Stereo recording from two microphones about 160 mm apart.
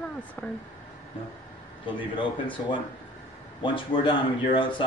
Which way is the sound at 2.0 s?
30° left (ahead or behind).